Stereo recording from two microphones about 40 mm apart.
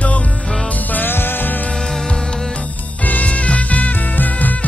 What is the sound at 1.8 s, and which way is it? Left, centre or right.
Music, centre.